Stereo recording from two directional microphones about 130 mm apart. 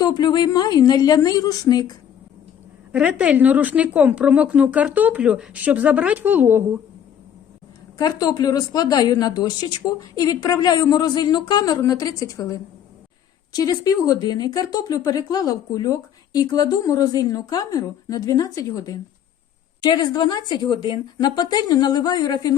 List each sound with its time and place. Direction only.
0.0 s a woman's voice: 35° left (ahead or behind)
2.9 s a woman's voice: 10° right (ahead or behind)
7.9 s a woman's voice: 30° left (ahead or behind)